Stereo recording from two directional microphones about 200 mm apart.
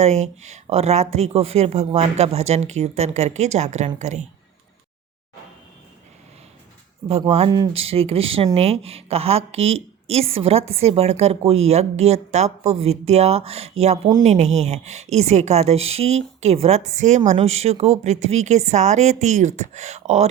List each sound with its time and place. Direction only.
0.0 s a woman's voice: 35° right (ahead or behind)
7.1 s a woman's voice: 30° right (ahead or behind)